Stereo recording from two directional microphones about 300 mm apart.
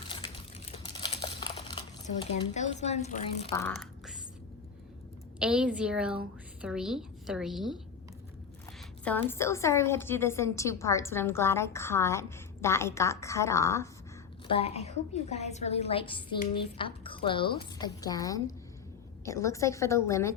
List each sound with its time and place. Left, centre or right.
0.7 s crumpling: centre
2.3 s a woman's voice: left
3.5 s speech: centre
5.4 s a woman's voice: centre
9.0 s a woman's voice: centre